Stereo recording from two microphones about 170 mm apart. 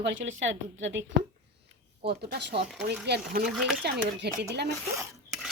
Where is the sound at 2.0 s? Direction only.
75° right (ahead or behind).